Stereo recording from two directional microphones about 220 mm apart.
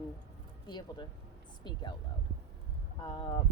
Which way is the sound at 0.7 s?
20° left (ahead or behind).